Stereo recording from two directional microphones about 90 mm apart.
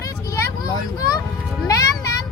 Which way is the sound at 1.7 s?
40° left (ahead or behind).